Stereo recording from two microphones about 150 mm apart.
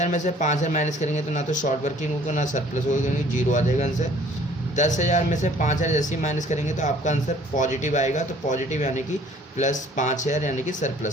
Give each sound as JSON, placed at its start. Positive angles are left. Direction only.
{"t": 0.0, "sound": "speech", "side_deg": 55}